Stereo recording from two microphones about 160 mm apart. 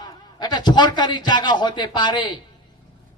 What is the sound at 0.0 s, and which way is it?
A man's voice, 25° left (ahead or behind).